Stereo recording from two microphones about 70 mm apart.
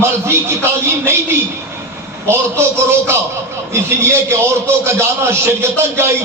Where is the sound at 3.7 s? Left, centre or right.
Right.